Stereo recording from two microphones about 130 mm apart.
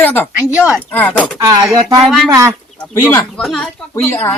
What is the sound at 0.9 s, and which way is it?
Speech, 10° left (ahead or behind).